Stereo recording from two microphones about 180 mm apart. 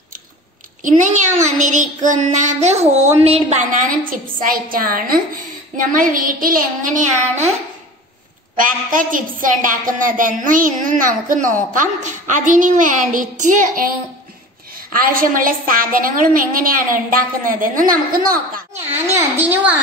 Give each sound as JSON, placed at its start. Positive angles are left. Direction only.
{"t": 0.8, "sound": "a child's voice", "side_deg": -45}
{"t": 8.5, "sound": "a woman's voice", "side_deg": -50}
{"t": 18.9, "sound": "a child's voice", "side_deg": -10}